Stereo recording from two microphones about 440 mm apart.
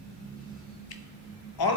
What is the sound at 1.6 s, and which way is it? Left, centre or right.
Speech, left.